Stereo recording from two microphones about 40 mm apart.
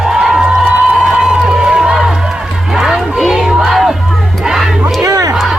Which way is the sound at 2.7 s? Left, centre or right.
Centre.